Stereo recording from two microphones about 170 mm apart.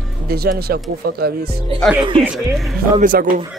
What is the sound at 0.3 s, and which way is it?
Speech, 65° right (ahead or behind).